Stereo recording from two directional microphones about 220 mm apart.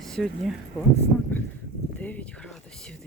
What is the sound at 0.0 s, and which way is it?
Speech, centre (ahead or behind).